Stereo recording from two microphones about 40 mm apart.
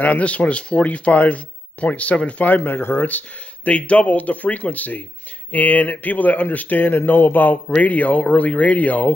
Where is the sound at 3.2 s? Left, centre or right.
Left.